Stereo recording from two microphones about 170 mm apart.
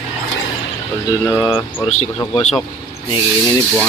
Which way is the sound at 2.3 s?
35° left (ahead or behind).